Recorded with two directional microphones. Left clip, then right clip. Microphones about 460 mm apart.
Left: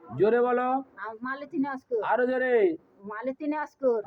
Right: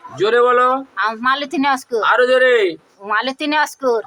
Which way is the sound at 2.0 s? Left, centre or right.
Left.